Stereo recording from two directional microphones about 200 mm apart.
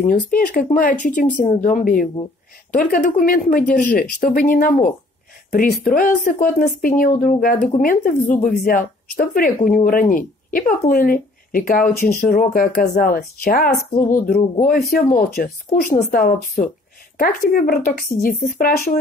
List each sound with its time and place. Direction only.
0.0 s speech: 45° left (ahead or behind)